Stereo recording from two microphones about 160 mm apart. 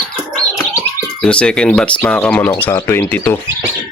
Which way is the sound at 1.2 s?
5° left (ahead or behind).